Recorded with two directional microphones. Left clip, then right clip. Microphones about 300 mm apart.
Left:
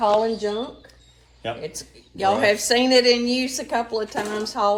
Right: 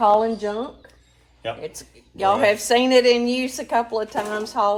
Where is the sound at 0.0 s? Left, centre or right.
Right.